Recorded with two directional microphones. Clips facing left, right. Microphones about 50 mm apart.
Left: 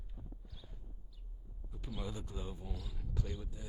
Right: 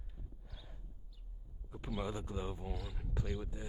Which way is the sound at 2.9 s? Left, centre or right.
Right.